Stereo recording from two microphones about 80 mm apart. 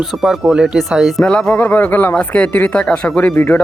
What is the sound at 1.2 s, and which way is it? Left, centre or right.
Speech, centre.